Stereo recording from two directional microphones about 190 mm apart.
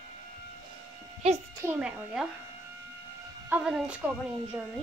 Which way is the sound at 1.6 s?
10° right (ahead or behind).